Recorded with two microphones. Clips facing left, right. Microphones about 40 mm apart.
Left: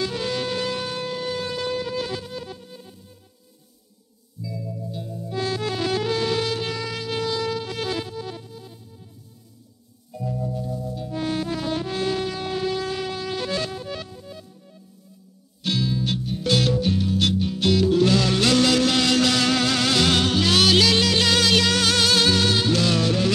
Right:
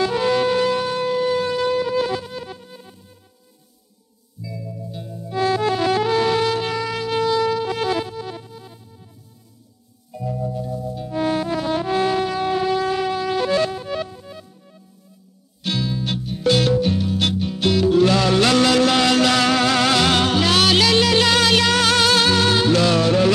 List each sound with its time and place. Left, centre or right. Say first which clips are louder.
0.0 s shofar: right 8 dB; right
4.4 s music: even; centre
10.1 s music: right 3 dB; centre